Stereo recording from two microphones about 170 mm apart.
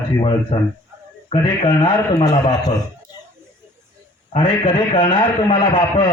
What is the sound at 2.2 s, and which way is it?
Speech, 25° left (ahead or behind).